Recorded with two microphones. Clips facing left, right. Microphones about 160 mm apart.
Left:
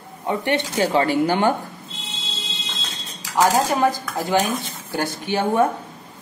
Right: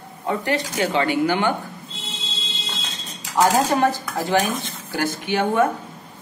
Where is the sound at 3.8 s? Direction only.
10° left (ahead or behind).